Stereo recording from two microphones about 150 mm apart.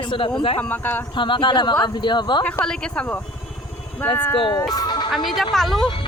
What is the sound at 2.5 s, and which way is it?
Speech, 5° left (ahead or behind).